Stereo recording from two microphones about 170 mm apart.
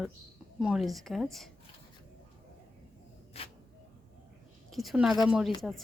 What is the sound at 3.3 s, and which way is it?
Speech, 35° left (ahead or behind).